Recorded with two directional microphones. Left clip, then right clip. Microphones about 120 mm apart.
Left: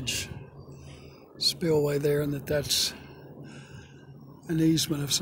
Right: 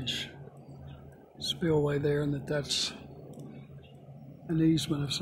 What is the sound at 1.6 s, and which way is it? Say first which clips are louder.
Speech: left 1 dB; 10° left (ahead or behind).